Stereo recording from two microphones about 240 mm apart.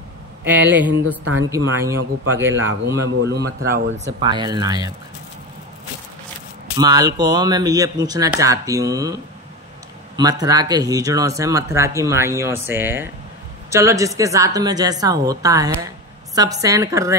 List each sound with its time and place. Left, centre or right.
0.5 s speech: centre
1.2 s speech: right
1.5 s speech: centre
2.8 s a man's voice: right
4.0 s speech: centre
6.8 s speech: centre